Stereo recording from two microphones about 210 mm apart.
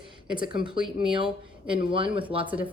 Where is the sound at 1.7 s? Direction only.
25° right (ahead or behind).